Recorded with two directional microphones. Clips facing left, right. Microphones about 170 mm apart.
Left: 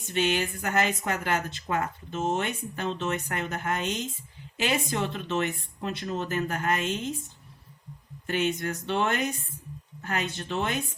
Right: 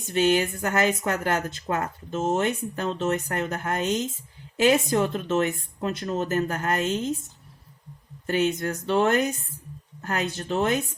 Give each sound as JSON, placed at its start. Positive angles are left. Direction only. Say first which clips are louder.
{"t": 0.1, "sound": "speech", "louder": "right 5 dB", "side_deg": -40}
{"t": 8.3, "sound": "speech", "louder": "right 4 dB", "side_deg": -40}